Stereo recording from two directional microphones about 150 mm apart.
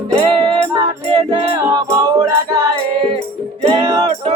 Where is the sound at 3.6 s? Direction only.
40° right (ahead or behind).